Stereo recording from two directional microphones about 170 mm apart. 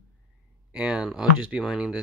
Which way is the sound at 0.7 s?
5° right (ahead or behind).